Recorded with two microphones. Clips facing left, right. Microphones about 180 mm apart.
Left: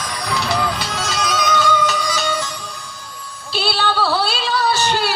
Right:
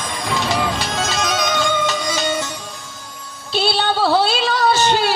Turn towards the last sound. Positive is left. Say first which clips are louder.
# right 3 dB
turn(degrees=-20)  # may be behind; listen again after turning